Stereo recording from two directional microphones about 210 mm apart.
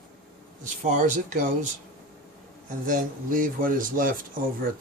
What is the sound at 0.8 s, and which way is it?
Speech, 35° right (ahead or behind).